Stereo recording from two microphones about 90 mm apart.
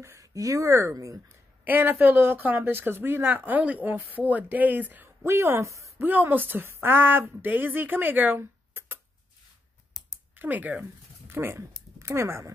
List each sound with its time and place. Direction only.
0.0 s speech: 35° right (ahead or behind)
1.7 s speech: 20° right (ahead or behind)
5.9 s speech: 20° right (ahead or behind)
9.9 s a sound: 5° left (ahead or behind)
10.3 s speech: 20° right (ahead or behind)